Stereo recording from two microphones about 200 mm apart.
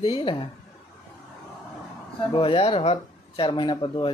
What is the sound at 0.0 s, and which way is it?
Speech, 25° left (ahead or behind).